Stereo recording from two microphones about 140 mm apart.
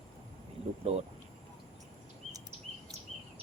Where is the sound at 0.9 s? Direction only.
45° right (ahead or behind).